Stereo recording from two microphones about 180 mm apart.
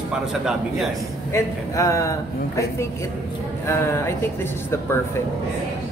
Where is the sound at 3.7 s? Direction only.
15° left (ahead or behind).